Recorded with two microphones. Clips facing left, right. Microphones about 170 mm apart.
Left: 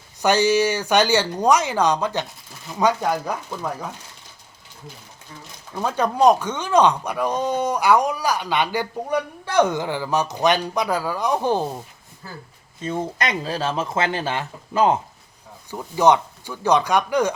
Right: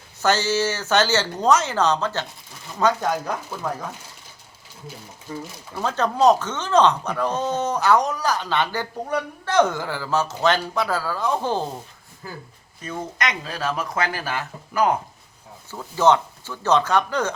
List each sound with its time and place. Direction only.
0.2 s speech: 15° left (ahead or behind)
5.7 s speech: 10° left (ahead or behind)
12.8 s speech: 30° left (ahead or behind)
15.7 s speech: 15° left (ahead or behind)